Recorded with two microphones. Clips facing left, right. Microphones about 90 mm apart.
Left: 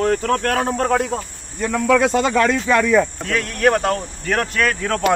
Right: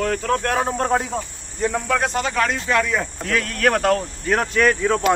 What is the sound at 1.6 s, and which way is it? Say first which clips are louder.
Speech: left 4 dB; 75° left (ahead or behind).